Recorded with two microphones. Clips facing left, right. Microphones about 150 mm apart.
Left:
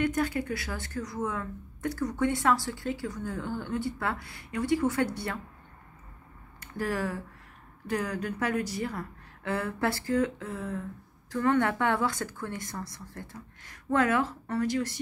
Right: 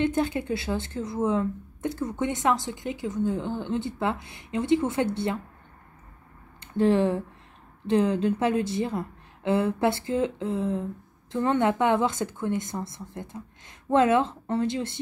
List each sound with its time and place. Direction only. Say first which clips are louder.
0.0 s a woman's voice: right 3 dB; 25° right (ahead or behind)
6.6 s a woman's voice: right 10 dB; 25° right (ahead or behind)